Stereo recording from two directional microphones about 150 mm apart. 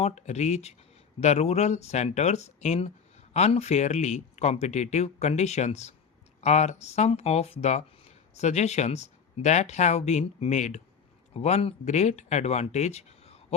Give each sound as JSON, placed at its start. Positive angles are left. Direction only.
{"t": 0.0, "sound": "speech", "side_deg": 50}